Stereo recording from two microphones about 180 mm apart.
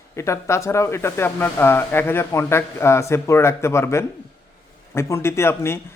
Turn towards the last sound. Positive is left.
turn(degrees=15)  # may be behind; listen again after turning